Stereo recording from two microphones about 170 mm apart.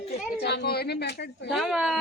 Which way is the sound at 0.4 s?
75° left (ahead or behind).